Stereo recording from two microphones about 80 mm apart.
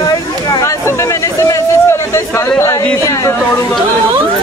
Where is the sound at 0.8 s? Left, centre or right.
Left.